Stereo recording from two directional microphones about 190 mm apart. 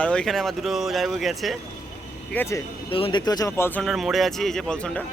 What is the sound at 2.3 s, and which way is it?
Speech, 15° left (ahead or behind).